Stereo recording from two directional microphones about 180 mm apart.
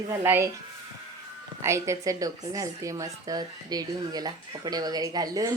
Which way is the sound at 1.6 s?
15° right (ahead or behind).